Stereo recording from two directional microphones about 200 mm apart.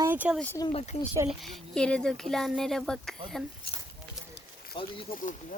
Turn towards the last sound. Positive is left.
turn(degrees=45)  # may be behind; listen again after turning